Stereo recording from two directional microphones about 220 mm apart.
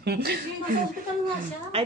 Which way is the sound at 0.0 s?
45° right (ahead or behind).